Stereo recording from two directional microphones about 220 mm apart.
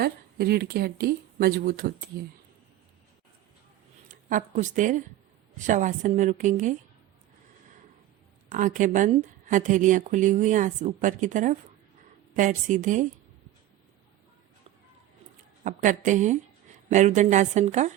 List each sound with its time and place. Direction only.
0.0 s speech: 45° right (ahead or behind)
4.1 s a woman's voice: 35° right (ahead or behind)
8.4 s speech: 35° right (ahead or behind)
15.6 s speech: 35° right (ahead or behind)